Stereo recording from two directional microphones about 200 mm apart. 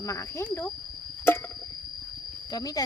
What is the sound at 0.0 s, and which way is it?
Speech, 15° left (ahead or behind).